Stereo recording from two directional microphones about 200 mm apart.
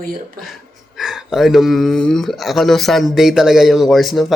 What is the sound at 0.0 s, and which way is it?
Speech, 45° right (ahead or behind).